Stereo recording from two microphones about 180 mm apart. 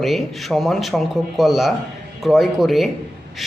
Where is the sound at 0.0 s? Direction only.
Centre (ahead or behind).